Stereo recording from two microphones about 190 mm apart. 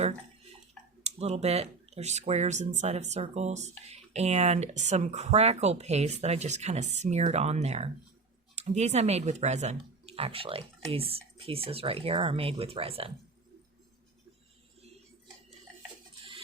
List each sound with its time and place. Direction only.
1.0 s speech: 35° right (ahead or behind)